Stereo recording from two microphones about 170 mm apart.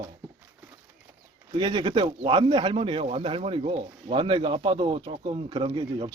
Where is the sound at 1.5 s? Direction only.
25° right (ahead or behind).